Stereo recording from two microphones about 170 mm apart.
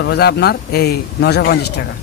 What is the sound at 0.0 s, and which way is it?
Speech, 70° left (ahead or behind).